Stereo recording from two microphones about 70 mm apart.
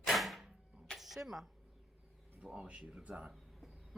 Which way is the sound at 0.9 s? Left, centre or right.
Centre.